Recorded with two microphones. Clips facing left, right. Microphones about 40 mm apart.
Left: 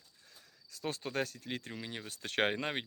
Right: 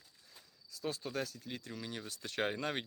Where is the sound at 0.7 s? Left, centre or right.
Left.